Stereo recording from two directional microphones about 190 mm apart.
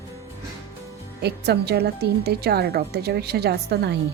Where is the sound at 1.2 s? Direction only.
60° right (ahead or behind).